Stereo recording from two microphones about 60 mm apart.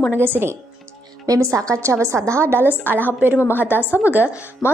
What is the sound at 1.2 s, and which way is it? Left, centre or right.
A woman's voice, right.